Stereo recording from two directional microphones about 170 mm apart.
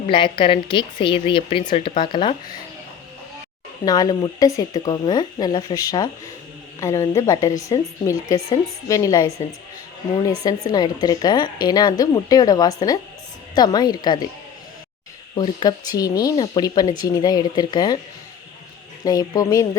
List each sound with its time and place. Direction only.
0.1 s speech: 30° left (ahead or behind)
3.8 s speech: 20° left (ahead or behind)
10.4 s speech: 25° left (ahead or behind)
15.4 s speech: 25° left (ahead or behind)
19.0 s speech: 20° left (ahead or behind)